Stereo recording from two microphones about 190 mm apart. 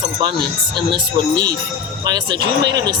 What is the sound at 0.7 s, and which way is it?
Speech, 25° right (ahead or behind).